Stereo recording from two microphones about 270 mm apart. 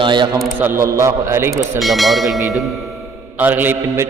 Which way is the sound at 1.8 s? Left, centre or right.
Centre.